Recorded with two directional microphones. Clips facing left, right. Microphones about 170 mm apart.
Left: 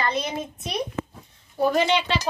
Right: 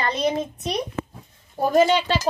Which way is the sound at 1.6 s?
45° right (ahead or behind).